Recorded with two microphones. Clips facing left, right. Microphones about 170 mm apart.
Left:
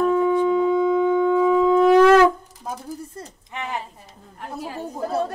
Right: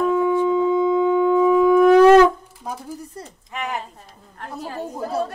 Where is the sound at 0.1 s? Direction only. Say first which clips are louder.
Even; 25° left (ahead or behind).